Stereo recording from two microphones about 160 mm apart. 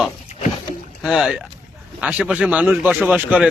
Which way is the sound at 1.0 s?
Centre (ahead or behind).